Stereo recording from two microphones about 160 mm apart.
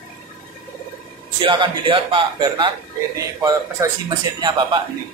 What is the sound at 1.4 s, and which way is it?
Speech, 30° right (ahead or behind).